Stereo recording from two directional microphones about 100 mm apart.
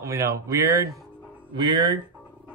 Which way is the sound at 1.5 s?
45° right (ahead or behind).